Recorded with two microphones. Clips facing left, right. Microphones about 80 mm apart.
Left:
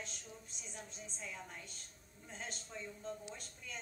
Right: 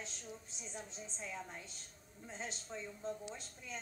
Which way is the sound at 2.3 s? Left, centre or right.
Centre.